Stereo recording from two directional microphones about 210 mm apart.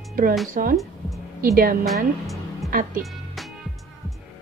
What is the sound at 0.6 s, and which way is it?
Speech, 40° right (ahead or behind).